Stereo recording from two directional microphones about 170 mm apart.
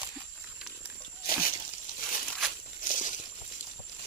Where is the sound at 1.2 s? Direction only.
55° left (ahead or behind).